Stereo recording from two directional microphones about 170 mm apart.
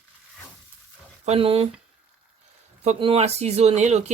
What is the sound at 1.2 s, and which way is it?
Speech, 35° right (ahead or behind).